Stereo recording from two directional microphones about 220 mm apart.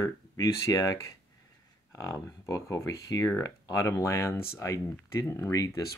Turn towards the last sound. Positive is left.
turn(degrees=15)  # may be behind; listen again after turning